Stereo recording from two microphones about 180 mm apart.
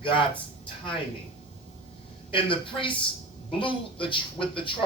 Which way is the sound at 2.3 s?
30° left (ahead or behind).